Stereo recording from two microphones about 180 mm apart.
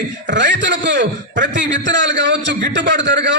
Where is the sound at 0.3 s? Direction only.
80° right.